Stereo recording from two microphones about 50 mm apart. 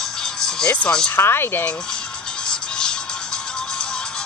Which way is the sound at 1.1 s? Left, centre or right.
Left.